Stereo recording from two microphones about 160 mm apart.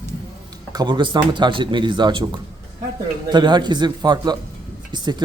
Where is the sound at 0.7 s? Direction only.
25° right (ahead or behind).